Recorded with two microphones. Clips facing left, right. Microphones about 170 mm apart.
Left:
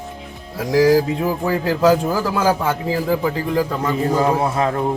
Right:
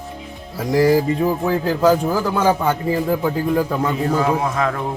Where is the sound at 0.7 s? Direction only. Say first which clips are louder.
Left 1 dB; centre (ahead or behind).